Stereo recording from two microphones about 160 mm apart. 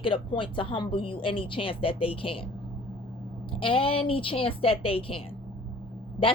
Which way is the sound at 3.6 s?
35° left (ahead or behind).